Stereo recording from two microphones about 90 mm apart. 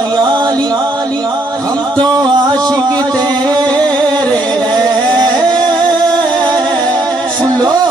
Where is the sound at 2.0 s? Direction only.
55° right (ahead or behind).